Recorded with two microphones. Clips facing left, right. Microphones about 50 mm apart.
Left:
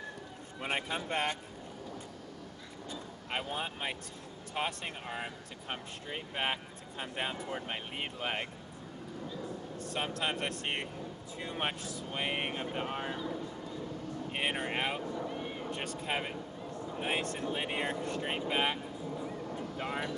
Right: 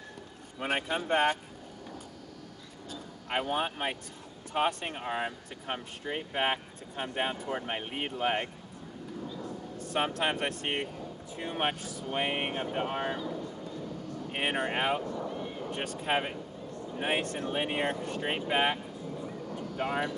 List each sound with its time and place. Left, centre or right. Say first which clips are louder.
0.6 s speech: right 4 dB; right
3.4 s speech: right 6 dB; right
6.9 s speech: right 5 dB; right
7.8 s speech: right 5 dB; right
9.9 s speech: right 5 dB; right
12.1 s speech: right 4 dB; right
14.3 s speech: right 4 dB; right
19.8 s speech: right 6 dB; right